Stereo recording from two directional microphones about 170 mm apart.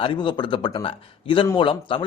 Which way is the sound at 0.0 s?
30° left (ahead or behind).